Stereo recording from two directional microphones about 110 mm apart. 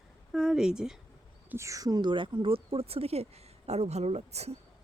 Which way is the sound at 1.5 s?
25° right (ahead or behind).